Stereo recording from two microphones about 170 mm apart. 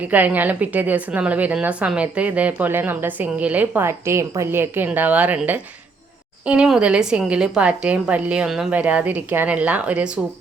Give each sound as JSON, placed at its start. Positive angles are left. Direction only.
{"t": 0.1, "sound": "a woman's voice", "side_deg": -10}